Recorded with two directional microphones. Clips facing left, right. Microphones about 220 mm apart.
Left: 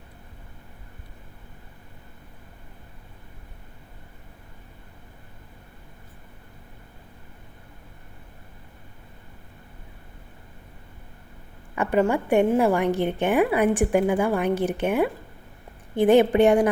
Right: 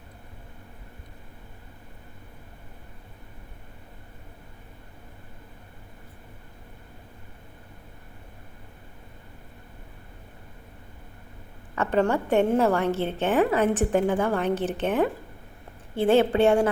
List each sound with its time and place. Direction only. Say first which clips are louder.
11.7 s a woman's voice: left 2 dB; 15° left (ahead or behind)